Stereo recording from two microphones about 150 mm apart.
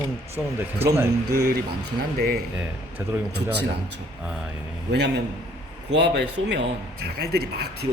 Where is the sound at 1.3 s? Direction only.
90° right.